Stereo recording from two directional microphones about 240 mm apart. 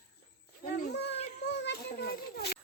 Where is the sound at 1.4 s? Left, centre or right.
Left.